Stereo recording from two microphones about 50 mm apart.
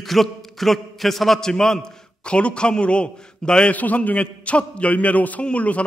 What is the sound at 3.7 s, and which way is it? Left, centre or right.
A man's voice, left.